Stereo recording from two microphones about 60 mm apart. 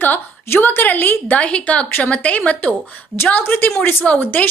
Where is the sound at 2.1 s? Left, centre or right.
Left.